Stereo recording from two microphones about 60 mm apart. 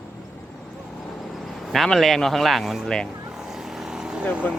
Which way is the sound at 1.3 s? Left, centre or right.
Centre.